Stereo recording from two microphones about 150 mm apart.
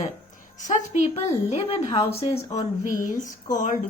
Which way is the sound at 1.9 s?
25° left (ahead or behind).